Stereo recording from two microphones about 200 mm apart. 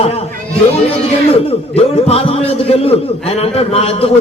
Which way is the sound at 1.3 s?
30° left (ahead or behind).